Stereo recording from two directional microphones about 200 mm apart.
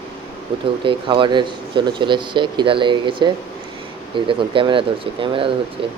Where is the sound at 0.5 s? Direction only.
25° right (ahead or behind).